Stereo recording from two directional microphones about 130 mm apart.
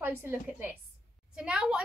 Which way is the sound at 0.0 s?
15° right (ahead or behind).